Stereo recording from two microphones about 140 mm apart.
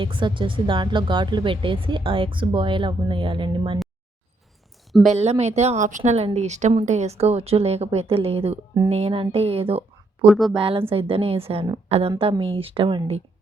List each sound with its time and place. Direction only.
0.0 s speech: 35° right (ahead or behind)
4.9 s a woman's voice: centre (ahead or behind)
5.1 s speech: 50° right (ahead or behind)
6.0 s speech: 45° right (ahead or behind)
10.2 s speech: centre (ahead or behind)
10.5 s a woman's voice: 40° right (ahead or behind)